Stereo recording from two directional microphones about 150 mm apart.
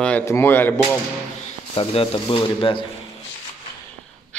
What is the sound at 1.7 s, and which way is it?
Speech, 40° left (ahead or behind).